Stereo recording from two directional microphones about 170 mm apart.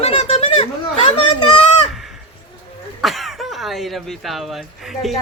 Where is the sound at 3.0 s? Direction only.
Centre (ahead or behind).